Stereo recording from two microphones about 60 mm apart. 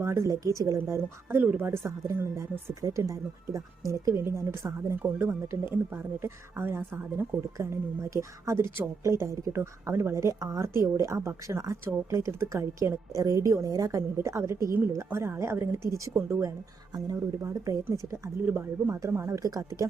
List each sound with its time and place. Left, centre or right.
0.0 s speech: right
0.3 s a woman's voice: right
1.4 s speech: right
1.6 s speech: right
2.8 s speech: right
4.2 s speech: right
8.1 s a woman's voice: right
16.1 s speech: right
17.4 s a woman's voice: right
18.4 s speech: right
18.9 s a woman's voice: right
19.4 s speech: right